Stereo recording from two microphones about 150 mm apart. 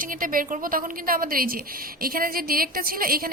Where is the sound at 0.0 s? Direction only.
65° right (ahead or behind).